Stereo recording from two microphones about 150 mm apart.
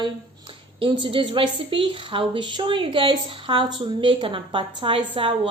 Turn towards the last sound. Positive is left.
turn(degrees=-35)  # may be behind; listen again after turning